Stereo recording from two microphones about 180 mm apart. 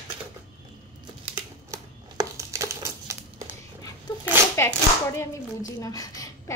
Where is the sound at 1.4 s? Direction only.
20° right (ahead or behind).